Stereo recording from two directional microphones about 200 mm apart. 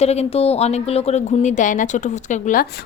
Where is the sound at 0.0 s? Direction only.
30° left (ahead or behind).